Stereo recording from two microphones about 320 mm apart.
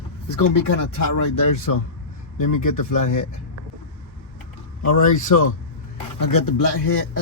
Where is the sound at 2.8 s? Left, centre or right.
Left.